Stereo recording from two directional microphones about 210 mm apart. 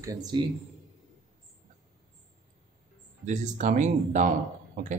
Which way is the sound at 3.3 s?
35° right (ahead or behind).